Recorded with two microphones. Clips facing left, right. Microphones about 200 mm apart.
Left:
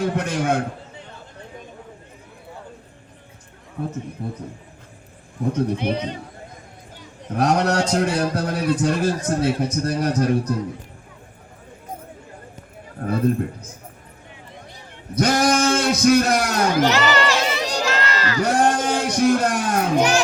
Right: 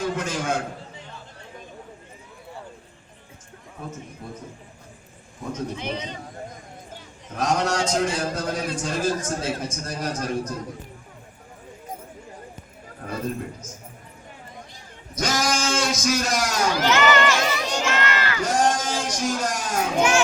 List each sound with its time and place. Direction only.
0.0 s a man's voice: 60° left (ahead or behind)
5.5 s a man's voice: 60° left (ahead or behind)
7.3 s a man's voice: 60° left (ahead or behind)
13.0 s a man's voice: 55° left (ahead or behind)
15.1 s a man's voice: 60° left (ahead or behind)
16.9 s crowd: 35° left (ahead or behind)
18.4 s speech: 60° left (ahead or behind)
20.0 s a child's voice: 35° left (ahead or behind)